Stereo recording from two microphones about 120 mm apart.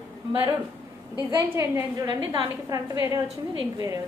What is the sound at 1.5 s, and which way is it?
A woman's voice, 25° right (ahead or behind).